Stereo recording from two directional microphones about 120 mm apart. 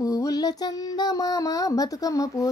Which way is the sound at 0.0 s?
30° left (ahead or behind).